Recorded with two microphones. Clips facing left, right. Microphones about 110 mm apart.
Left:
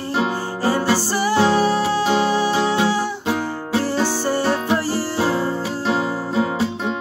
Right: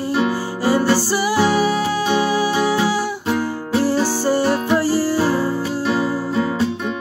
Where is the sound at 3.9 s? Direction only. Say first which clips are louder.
Right 2 dB; 20° left (ahead or behind).